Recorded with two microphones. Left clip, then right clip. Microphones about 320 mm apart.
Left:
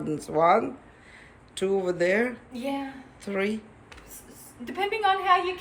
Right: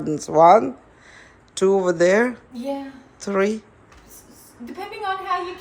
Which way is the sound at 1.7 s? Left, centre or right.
Centre.